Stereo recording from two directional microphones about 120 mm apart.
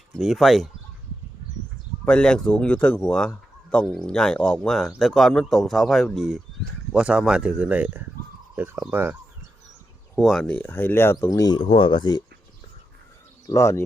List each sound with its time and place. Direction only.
0.2 s a man's voice: centre (ahead or behind)
2.0 s a man's voice: 5° left (ahead or behind); by 9.1 s 15° right (ahead or behind)
10.2 s speech: centre (ahead or behind); by 11.3 s 20° left (ahead or behind)
11.3 s speech: 30° left (ahead or behind)
11.6 s speech: 45° left (ahead or behind)
13.5 s speech: 25° left (ahead or behind)